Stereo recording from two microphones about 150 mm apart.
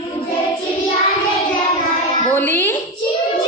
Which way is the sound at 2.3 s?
10° left (ahead or behind).